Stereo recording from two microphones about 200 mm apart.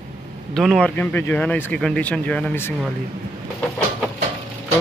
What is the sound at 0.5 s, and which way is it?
Speech, centre (ahead or behind).